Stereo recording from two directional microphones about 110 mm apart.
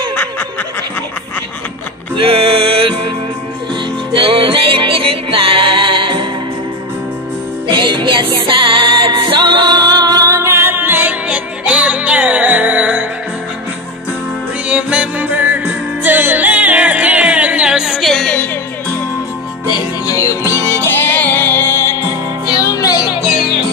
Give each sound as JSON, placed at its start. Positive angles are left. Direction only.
{"t": 0.1, "sound": "snicker", "side_deg": 15}
{"t": 2.3, "sound": "music", "side_deg": -55}
{"t": 4.2, "sound": "music", "side_deg": -50}
{"t": 7.6, "sound": "music", "side_deg": -45}
{"t": 14.7, "sound": "music", "side_deg": -10}
{"t": 18.3, "sound": "music", "side_deg": 15}
{"t": 19.7, "sound": "music", "side_deg": 30}
{"t": 22.5, "sound": "music", "side_deg": 30}